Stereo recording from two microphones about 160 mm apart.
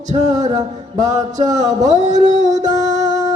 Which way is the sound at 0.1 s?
45° right (ahead or behind).